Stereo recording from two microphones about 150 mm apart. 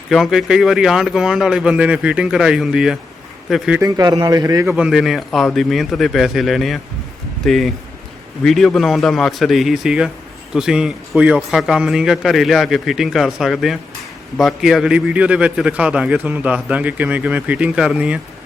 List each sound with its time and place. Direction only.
0.1 s a man's voice: centre (ahead or behind)
3.8 s speech: 25° right (ahead or behind)
4.7 s a man's voice: centre (ahead or behind)